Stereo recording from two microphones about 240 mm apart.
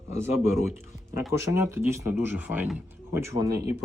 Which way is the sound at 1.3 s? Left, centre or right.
Centre.